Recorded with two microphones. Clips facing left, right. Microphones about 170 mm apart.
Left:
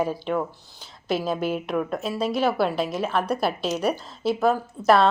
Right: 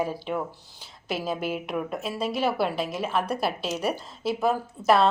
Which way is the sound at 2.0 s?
35° left (ahead or behind).